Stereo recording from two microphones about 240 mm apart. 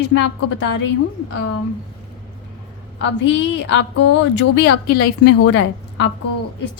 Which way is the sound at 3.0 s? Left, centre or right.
Left.